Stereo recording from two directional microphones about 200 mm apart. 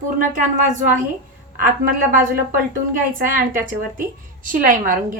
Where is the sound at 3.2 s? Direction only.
45° right (ahead or behind).